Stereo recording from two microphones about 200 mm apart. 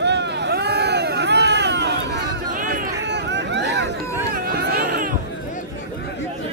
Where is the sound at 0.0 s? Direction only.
60° right (ahead or behind).